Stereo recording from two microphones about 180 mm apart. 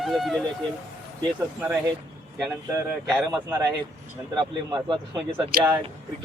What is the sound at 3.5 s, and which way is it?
Speech, 20° right (ahead or behind).